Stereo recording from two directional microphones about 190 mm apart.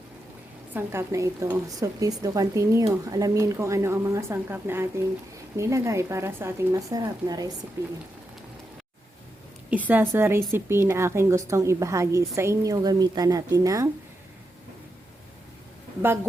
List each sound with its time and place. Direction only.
0.7 s a woman's voice: 10° right (ahead or behind)
9.6 s a woman's voice: 10° right (ahead or behind)